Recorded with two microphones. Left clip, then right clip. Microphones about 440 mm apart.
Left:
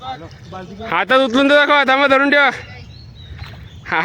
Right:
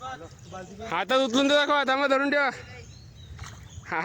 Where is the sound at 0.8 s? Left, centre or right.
Right.